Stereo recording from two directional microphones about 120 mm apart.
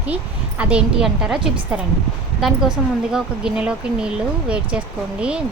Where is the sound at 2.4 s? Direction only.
5° right (ahead or behind).